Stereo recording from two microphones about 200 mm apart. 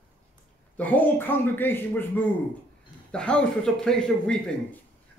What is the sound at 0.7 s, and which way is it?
A man's voice, 10° left (ahead or behind).